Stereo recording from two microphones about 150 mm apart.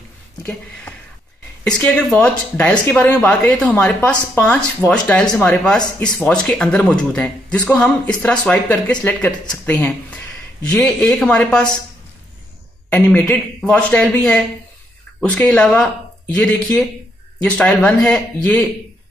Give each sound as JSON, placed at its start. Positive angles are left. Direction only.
{"t": 0.4, "sound": "a man's voice", "side_deg": 20}
{"t": 7.5, "sound": "speech", "side_deg": 20}
{"t": 7.8, "sound": "speech", "side_deg": 5}
{"t": 12.9, "sound": "a man's voice", "side_deg": 5}